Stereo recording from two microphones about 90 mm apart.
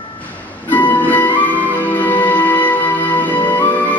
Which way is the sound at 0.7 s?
20° left (ahead or behind).